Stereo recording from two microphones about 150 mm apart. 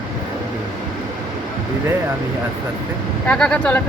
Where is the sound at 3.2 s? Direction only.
5° left (ahead or behind).